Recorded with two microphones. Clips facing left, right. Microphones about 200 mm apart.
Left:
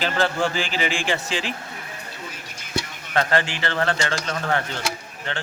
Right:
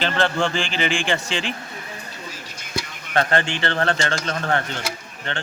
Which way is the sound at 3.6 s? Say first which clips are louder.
Right 2 dB; 30° right (ahead or behind).